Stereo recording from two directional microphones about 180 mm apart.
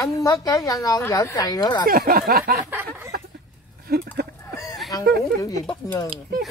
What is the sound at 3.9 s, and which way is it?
Speech, 60° right (ahead or behind).